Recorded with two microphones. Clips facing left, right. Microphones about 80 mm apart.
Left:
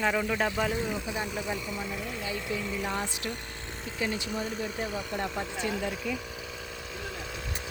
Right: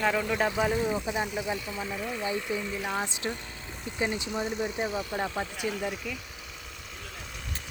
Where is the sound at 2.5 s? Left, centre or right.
Right.